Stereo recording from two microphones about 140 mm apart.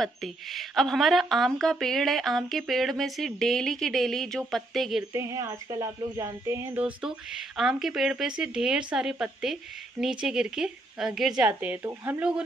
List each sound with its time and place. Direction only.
0.0 s speech: centre (ahead or behind)
5.1 s speech: 20° right (ahead or behind)
6.8 s speech: 5° right (ahead or behind)